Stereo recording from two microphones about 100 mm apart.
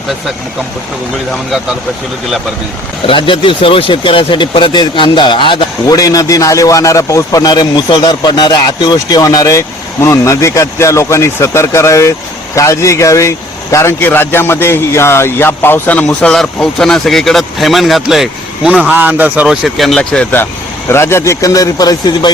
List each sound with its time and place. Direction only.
3.1 s speech: 60° left (ahead or behind)
5.9 s a man's voice: 35° left (ahead or behind); by 16.0 s 20° left (ahead or behind)
16.0 s speech: 5° left (ahead or behind)
18.7 s speech: 15° right (ahead or behind)
19.5 s speech: centre (ahead or behind)
20.0 s speech: 15° left (ahead or behind)
20.9 s a man's voice: 25° left (ahead or behind); by 22.3 s 40° left (ahead or behind)